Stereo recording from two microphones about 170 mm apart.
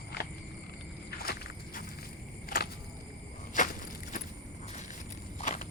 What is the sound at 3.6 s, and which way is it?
Walk, 50° left (ahead or behind).